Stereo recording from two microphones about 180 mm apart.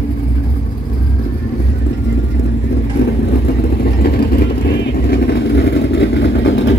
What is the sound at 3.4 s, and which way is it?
Vehicle, 60° left (ahead or behind).